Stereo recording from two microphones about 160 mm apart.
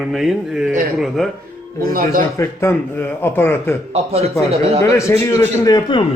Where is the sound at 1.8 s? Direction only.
65° right (ahead or behind).